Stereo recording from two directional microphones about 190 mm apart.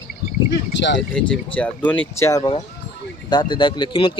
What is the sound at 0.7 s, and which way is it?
Speech, 70° left (ahead or behind).